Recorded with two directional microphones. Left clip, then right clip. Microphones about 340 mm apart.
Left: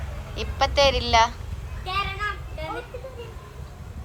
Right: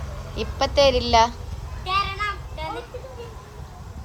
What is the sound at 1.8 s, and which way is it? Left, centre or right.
Children playing, centre.